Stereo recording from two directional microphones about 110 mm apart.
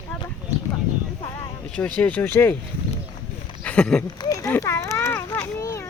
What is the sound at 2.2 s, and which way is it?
Speech, 20° left (ahead or behind).